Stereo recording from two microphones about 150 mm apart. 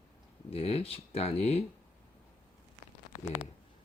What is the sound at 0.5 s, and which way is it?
Speech, 40° left (ahead or behind).